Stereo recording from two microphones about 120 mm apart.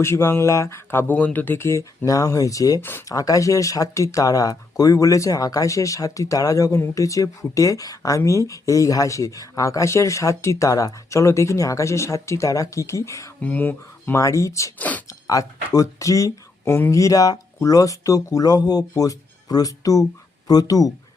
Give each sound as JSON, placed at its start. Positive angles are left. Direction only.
{"t": 0.0, "sound": "speech", "side_deg": 20}
{"t": 13.4, "sound": "speech", "side_deg": 15}
{"t": 14.8, "sound": "speech", "side_deg": 15}
{"t": 15.3, "sound": "speech", "side_deg": 30}